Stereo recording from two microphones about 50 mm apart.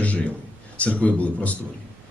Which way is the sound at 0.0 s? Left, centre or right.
Left.